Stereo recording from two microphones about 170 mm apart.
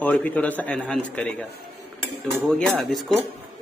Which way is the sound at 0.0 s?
10° left (ahead or behind).